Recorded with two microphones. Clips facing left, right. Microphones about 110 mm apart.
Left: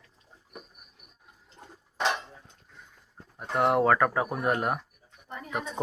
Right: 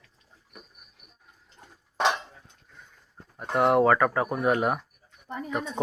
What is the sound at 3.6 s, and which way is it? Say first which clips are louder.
Speech: right 2 dB; centre (ahead or behind).